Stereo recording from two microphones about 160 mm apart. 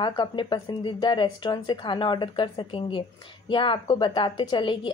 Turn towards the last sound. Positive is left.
turn(degrees=30)  # may be behind; listen again after turning